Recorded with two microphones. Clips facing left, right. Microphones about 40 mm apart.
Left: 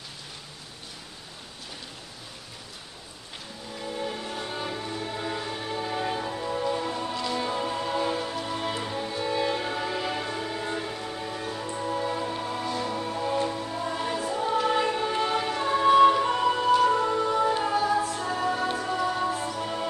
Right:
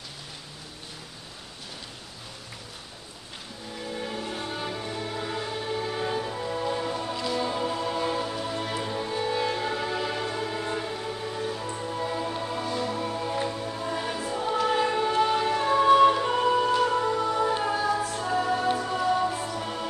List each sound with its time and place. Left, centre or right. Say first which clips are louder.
3.8 s music: left 1 dB; centre
8.5 s music: even; centre
8.8 s music: right 1 dB; centre